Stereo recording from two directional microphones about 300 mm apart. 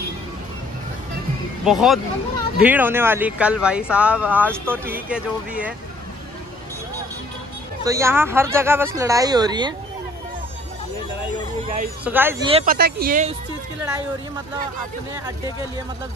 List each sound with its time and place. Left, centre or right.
1.6 s speech: centre
7.8 s speech: centre
12.0 s speech: centre
12.4 s speech: centre
12.7 s speech: right